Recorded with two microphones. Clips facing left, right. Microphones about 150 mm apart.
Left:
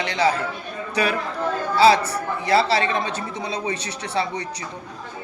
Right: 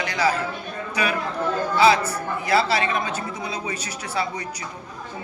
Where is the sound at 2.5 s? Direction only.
30° left (ahead or behind).